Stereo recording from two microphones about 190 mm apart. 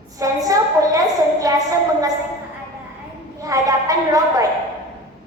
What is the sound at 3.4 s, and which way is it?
A woman's voice, 20° right (ahead or behind).